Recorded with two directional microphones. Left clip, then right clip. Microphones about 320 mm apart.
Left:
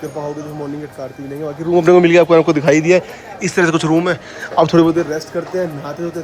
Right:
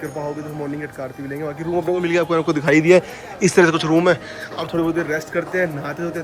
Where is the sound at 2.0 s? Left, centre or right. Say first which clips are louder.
Left 9 dB; centre.